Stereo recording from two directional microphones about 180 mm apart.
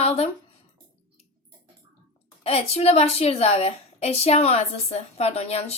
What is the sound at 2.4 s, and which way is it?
A woman's voice, 35° left (ahead or behind).